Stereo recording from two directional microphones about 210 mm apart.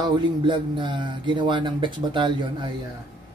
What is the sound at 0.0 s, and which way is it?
Speech, 20° right (ahead or behind).